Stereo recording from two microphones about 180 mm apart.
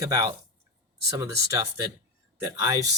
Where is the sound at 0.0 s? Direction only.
20° right (ahead or behind).